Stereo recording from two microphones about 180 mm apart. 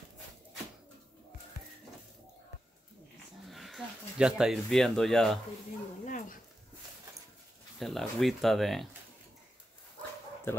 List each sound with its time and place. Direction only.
3.4 s speech: centre (ahead or behind)
6.0 s dog: 45° left (ahead or behind)
7.8 s speech: centre (ahead or behind)